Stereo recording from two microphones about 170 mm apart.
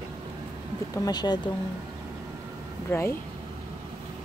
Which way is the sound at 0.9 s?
20° left (ahead or behind).